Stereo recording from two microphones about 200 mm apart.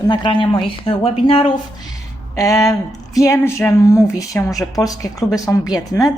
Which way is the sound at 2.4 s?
15° left (ahead or behind).